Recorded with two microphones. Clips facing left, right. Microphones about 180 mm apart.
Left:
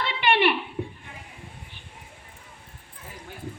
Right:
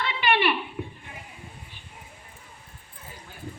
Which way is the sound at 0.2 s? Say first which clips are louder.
Left 2 dB; 55° left (ahead or behind).